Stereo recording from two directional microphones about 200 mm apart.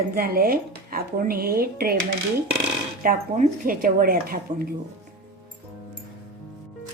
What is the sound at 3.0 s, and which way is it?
Speech, 40° right (ahead or behind).